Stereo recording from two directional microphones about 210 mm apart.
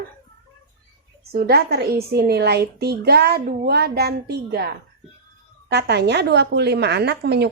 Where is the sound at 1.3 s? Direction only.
50° right (ahead or behind).